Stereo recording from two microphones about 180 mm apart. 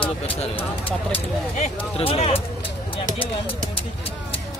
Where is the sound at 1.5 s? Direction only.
35° left (ahead or behind).